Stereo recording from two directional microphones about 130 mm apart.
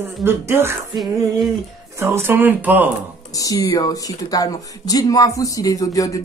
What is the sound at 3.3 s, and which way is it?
Speech, 25° left (ahead or behind).